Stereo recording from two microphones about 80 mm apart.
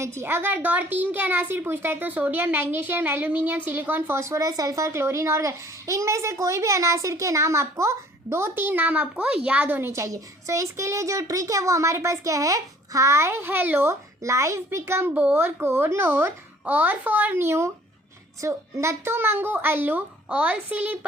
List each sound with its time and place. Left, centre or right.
0.0 s a woman's voice: right
4.2 s a child's voice: right
9.9 s a child's voice: right
15.1 s a child's voice: centre
15.4 s a woman's voice: right
17.4 s a child's voice: right